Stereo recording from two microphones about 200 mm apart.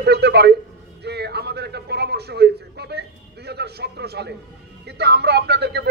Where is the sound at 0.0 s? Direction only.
55° right (ahead or behind).